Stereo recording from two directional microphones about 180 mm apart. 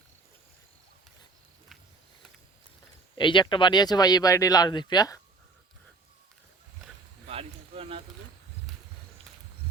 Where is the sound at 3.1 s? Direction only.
25° left (ahead or behind).